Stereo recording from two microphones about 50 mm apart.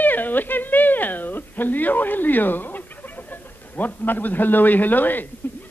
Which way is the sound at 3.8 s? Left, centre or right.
Left.